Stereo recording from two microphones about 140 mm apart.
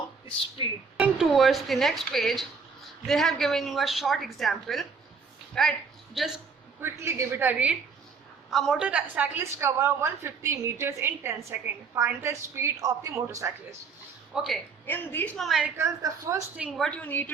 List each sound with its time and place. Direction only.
0.3 s speech: 40° left (ahead or behind)
0.9 s a woman's voice: 5° right (ahead or behind)
6.8 s a woman's voice: 20° right (ahead or behind)
8.4 s a woman's voice: centre (ahead or behind); by 13.7 s 20° right (ahead or behind)
14.3 s a woman's voice: centre (ahead or behind)
14.8 s a woman's voice: 15° left (ahead or behind)
15.4 s a woman's voice: centre (ahead or behind)
16.0 s a woman's voice: 20° right (ahead or behind)
16.6 s a woman's voice: 5° right (ahead or behind)
16.8 s a woman's voice: 10° left (ahead or behind)